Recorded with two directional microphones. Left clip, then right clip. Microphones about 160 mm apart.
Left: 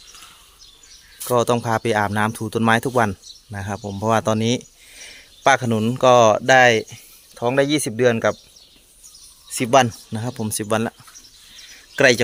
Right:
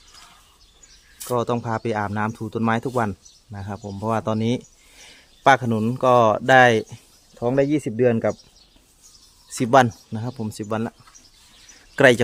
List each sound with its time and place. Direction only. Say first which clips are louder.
1.3 s speech: left 5 dB; centre (ahead or behind); by 7.0 s 30° right (ahead or behind)
7.3 s speech: left 2 dB; 15° right (ahead or behind)
9.6 s speech: even; 25° right (ahead or behind)
10.1 s speech: left 4 dB; 5° right (ahead or behind)
11.9 s speech: even; 30° right (ahead or behind)